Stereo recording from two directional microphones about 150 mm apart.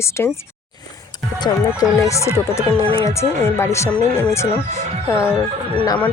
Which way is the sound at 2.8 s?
40° right (ahead or behind).